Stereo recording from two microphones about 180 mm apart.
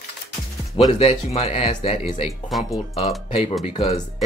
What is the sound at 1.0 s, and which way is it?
Speech, 35° left (ahead or behind).